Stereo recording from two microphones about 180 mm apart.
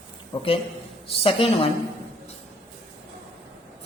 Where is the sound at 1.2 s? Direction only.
30° left (ahead or behind).